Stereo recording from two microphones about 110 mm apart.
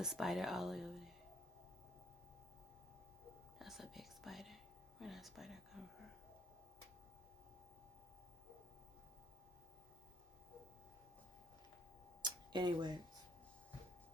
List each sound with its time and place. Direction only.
0.0 s speech: 5° right (ahead or behind)
3.6 s whispering: centre (ahead or behind)
12.2 s tick-tock: 40° right (ahead or behind)